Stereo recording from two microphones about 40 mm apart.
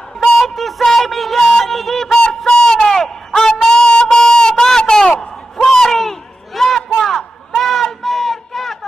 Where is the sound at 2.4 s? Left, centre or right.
Centre.